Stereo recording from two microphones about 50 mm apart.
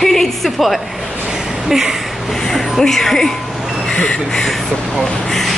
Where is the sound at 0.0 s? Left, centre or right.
Centre.